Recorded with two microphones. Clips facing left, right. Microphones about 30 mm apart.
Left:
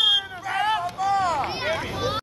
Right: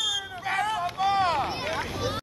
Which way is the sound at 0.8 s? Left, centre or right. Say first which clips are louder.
Left 1 dB; right.